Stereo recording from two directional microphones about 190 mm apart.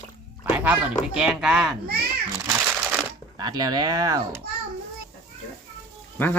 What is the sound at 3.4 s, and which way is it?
A child's voice, 20° right (ahead or behind).